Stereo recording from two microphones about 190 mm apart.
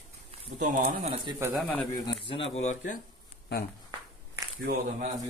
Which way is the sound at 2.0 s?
25° left (ahead or behind).